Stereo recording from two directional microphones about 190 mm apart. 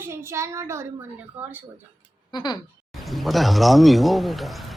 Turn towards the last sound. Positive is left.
turn(degrees=0)  # may be behind; listen again after turning